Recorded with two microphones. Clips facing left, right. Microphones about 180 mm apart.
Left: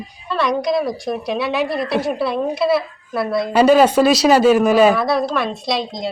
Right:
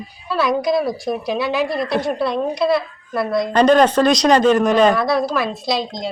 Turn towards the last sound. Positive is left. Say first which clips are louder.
# even
turn(degrees=0)  # may be behind; listen again after turning